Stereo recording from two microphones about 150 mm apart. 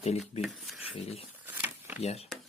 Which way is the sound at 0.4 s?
Centre (ahead or behind).